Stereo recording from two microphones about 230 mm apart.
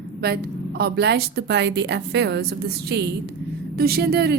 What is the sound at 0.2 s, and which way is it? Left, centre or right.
A woman's voice, right.